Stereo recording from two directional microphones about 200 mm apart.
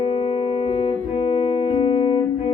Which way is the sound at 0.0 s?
25° left (ahead or behind).